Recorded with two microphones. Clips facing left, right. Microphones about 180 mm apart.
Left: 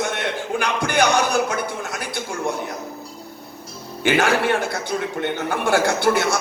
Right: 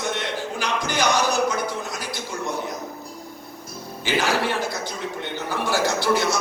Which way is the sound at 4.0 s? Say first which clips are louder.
Left 4 dB; 55° left (ahead or behind).